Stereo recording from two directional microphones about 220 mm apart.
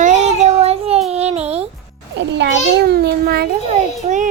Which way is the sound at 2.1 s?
50° right (ahead or behind).